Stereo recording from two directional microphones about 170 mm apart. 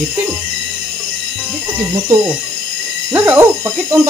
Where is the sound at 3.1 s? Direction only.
10° right (ahead or behind).